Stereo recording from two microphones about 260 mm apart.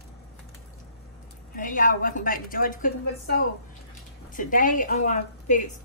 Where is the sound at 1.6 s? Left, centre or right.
Left.